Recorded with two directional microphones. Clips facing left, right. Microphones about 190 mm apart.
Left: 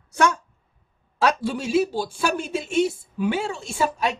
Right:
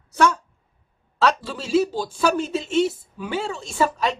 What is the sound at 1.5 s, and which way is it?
A woman's voice, 10° left (ahead or behind).